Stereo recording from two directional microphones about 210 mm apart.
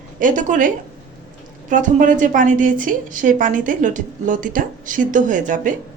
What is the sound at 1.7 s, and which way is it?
A woman's voice, 35° right (ahead or behind).